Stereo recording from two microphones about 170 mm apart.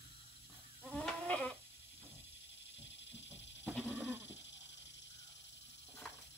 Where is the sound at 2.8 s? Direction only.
90° left.